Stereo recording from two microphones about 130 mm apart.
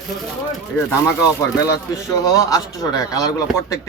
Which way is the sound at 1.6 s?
25° left (ahead or behind).